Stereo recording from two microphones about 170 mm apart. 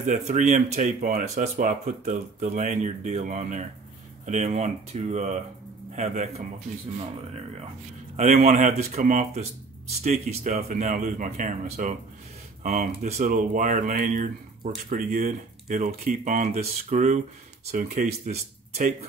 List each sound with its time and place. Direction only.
0.0 s speech: 45° right (ahead or behind)
8.2 s speech: 45° right (ahead or behind)
13.0 s speech: 45° right (ahead or behind)